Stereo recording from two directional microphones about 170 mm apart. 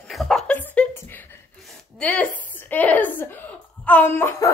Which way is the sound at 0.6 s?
10° left (ahead or behind).